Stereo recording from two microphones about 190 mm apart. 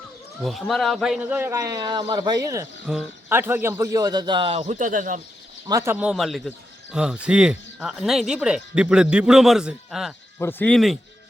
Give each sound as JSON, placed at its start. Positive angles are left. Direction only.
{"t": 0.4, "sound": "a man's voice", "side_deg": 0}
{"t": 5.6, "sound": "speech", "side_deg": -15}
{"t": 10.3, "sound": "speech", "side_deg": 10}